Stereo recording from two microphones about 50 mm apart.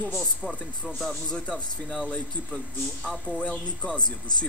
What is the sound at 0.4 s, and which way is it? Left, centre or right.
Speech, centre.